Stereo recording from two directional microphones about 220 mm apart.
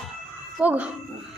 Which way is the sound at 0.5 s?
5° right (ahead or behind).